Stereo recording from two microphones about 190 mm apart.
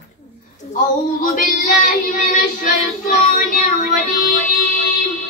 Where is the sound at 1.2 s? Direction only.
45° left (ahead or behind).